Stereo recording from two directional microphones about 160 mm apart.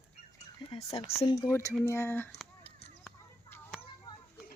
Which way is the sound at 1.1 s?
20° left (ahead or behind).